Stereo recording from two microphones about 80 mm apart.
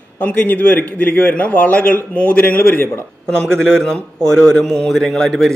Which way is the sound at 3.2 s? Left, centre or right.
Centre.